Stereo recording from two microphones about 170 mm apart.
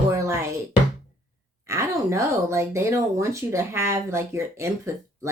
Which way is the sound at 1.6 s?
15° right (ahead or behind).